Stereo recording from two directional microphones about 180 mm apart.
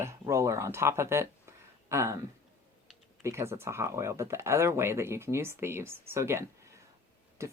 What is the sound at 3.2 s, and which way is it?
Speech, 15° right (ahead or behind).